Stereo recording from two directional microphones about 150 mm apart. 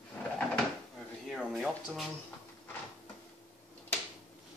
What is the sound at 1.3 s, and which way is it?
Speech, centre (ahead or behind).